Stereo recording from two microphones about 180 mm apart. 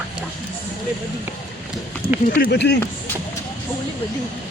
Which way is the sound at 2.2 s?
50° left (ahead or behind).